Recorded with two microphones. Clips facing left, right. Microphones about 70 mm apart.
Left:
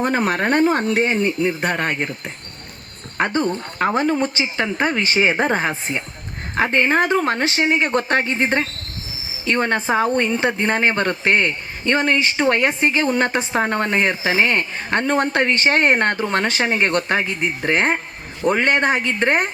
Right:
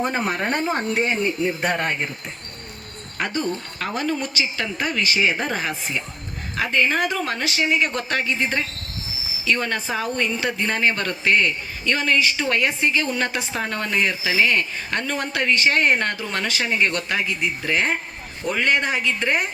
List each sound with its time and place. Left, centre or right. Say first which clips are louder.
0.0 s speech: left 4 dB; left
0.3 s speech: left 5 dB; left
1.5 s speech: left 2 dB; left
3.2 s speech: left 5 dB; left